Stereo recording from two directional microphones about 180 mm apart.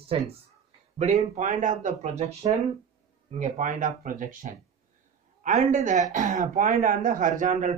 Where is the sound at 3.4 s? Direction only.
45° right (ahead or behind).